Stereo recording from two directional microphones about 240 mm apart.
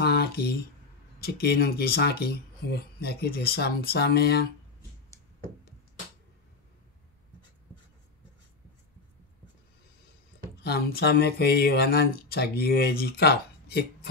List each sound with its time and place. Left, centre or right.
0.0 s a sound: left
1.2 s speech: left
10.6 s speech: left